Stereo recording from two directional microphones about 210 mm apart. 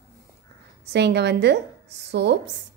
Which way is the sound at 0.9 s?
55° right (ahead or behind).